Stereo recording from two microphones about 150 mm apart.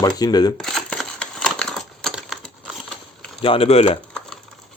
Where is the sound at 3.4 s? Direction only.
40° left (ahead or behind).